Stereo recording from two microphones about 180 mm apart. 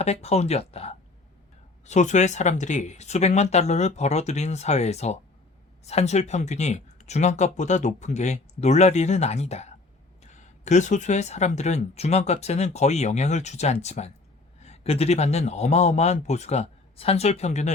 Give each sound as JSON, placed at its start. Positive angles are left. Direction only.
{"t": 0.0, "sound": "speech", "side_deg": 35}